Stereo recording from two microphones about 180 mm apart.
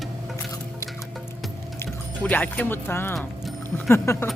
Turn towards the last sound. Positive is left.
turn(degrees=15)  # may be behind; listen again after turning